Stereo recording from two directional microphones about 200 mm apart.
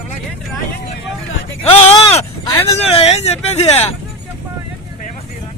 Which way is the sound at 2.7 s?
30° left (ahead or behind).